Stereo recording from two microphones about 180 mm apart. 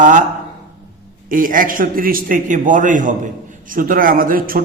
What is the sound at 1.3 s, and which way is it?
A man's voice, 50° right (ahead or behind).